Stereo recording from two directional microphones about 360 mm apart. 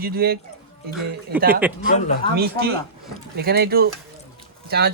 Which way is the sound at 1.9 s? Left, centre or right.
Centre.